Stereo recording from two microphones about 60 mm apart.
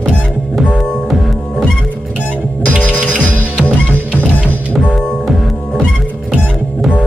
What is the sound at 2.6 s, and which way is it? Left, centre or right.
Music, right.